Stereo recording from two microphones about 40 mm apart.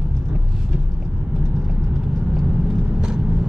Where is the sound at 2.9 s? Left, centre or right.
Right.